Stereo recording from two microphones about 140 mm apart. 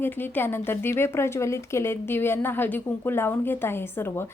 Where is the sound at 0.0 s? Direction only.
15° left (ahead or behind).